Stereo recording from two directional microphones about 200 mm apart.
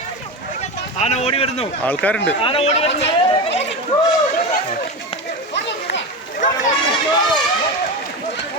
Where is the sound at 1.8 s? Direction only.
10° left (ahead or behind).